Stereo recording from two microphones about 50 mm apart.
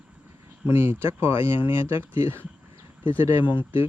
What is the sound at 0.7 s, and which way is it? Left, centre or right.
Speech, right.